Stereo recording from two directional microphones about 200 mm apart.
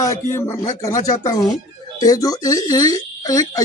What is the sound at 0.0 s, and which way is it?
Speech, 15° left (ahead or behind).